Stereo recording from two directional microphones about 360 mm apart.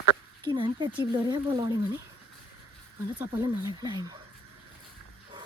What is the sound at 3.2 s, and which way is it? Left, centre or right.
Speech, centre.